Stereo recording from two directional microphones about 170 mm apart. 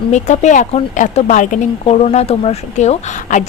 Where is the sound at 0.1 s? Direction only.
45° left (ahead or behind).